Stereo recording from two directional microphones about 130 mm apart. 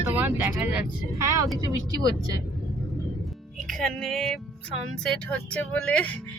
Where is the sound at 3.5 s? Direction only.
Centre (ahead or behind).